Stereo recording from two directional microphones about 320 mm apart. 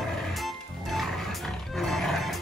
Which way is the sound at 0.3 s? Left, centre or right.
Centre.